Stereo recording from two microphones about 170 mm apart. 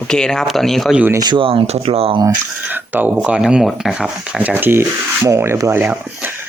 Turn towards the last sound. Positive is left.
turn(degrees=-10)  # may be behind; listen again after turning